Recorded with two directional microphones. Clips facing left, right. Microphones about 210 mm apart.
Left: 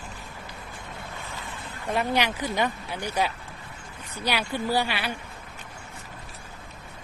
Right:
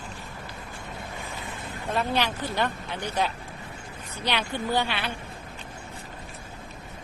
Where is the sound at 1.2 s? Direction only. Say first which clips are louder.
Right 2 dB; 15° right (ahead or behind).